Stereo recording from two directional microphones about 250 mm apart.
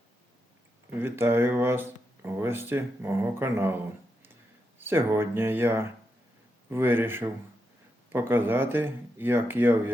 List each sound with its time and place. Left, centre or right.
0.9 s speech: centre
4.8 s speech: centre